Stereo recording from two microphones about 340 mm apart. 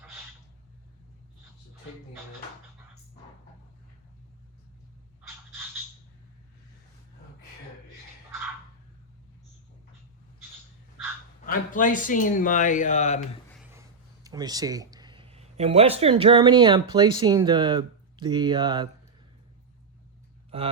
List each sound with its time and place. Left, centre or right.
11.4 s speech: left
14.3 s speech: centre